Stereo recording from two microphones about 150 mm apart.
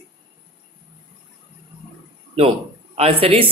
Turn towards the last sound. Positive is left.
turn(degrees=-40)  # may be behind; listen again after turning